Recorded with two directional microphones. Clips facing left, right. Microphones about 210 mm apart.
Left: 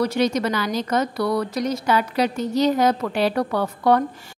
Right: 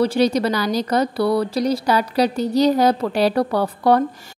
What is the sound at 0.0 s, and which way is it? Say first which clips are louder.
A woman's voice: right 3 dB; 30° right (ahead or behind).